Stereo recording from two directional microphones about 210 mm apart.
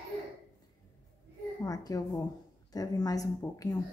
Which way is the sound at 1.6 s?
15° left (ahead or behind).